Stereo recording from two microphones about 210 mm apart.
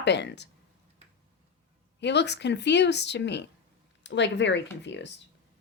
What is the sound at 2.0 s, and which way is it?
Speech, 55° left (ahead or behind).